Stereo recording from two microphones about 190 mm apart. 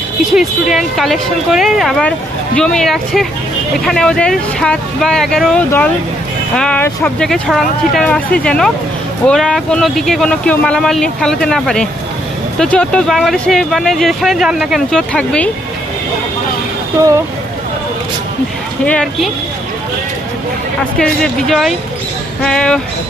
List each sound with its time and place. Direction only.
0.3 s speech: centre (ahead or behind)
17.0 s speech: 15° right (ahead or behind)
18.9 s speech: centre (ahead or behind)
21.0 s speech: centre (ahead or behind)